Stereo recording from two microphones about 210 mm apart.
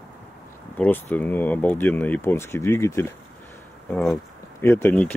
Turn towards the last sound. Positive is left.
turn(degrees=10)  # may be behind; listen again after turning